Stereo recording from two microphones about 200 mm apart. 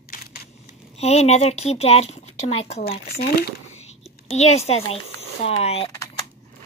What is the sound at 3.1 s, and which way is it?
Speech, 50° left (ahead or behind).